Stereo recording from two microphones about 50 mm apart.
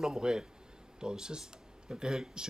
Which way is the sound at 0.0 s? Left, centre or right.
Centre.